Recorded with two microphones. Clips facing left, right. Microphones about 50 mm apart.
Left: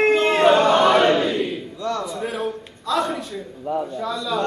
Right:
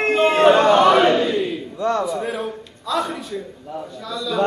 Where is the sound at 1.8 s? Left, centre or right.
Right.